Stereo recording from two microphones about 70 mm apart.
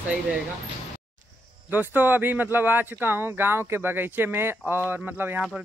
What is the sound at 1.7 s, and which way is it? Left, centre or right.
Speech, right.